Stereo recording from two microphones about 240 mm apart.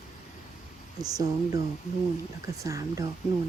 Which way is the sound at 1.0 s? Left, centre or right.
Centre.